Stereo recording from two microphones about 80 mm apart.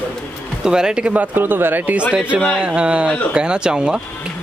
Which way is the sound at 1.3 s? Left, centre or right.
Right.